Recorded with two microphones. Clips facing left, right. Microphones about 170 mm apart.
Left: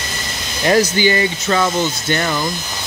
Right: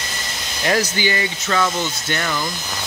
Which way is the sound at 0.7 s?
35° left (ahead or behind).